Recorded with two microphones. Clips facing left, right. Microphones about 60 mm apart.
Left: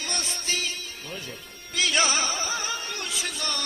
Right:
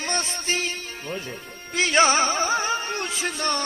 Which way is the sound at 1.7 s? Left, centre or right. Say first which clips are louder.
Right 6 dB; right.